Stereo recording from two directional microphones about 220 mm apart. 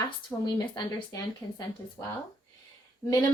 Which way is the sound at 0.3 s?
20° left (ahead or behind).